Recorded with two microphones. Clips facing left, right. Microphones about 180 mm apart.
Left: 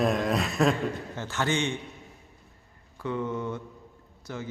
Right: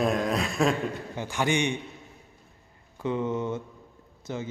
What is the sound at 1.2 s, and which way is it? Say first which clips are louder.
Speech: right 2 dB; 15° right (ahead or behind).